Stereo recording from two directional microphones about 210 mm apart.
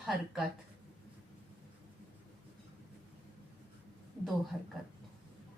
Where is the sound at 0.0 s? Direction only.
Centre (ahead or behind).